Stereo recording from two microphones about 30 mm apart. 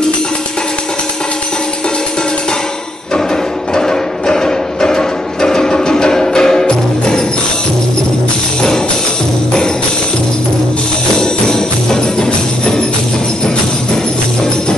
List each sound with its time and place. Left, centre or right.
3.7 s music: left
11.1 s music: left